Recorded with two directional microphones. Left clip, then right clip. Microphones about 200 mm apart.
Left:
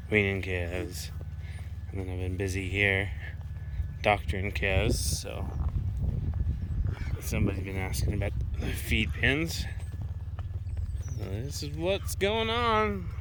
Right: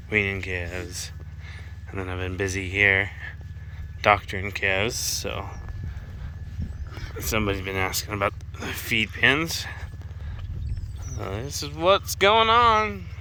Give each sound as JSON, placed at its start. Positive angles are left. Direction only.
{"t": 0.1, "sound": "speech", "side_deg": 10}
{"t": 7.2, "sound": "speech", "side_deg": -35}
{"t": 8.1, "sound": "speech", "side_deg": 5}
{"t": 11.2, "sound": "speech", "side_deg": 5}